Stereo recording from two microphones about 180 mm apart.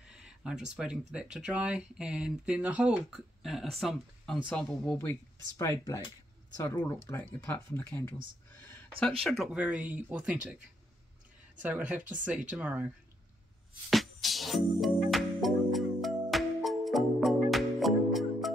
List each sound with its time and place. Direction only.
0.0 s speech: 5° right (ahead or behind); by 8.2 s 10° left (ahead or behind)
9.2 s speech: centre (ahead or behind)
11.6 s speech: 10° right (ahead or behind)
13.8 s music: centre (ahead or behind)